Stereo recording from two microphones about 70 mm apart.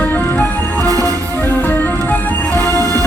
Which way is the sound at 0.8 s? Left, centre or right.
Right.